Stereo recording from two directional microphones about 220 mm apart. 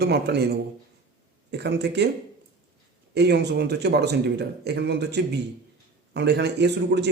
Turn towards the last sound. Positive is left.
turn(degrees=-50)  # may be behind; listen again after turning